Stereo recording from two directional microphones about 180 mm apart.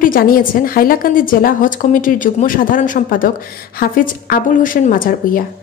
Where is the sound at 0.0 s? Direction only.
50° left (ahead or behind).